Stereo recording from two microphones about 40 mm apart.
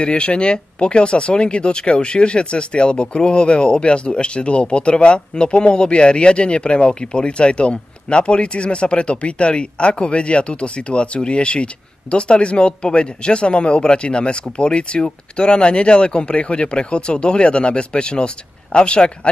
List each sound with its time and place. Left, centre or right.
0.0 s speech: left